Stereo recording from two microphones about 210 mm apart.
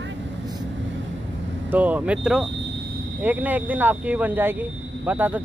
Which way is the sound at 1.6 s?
5° right (ahead or behind).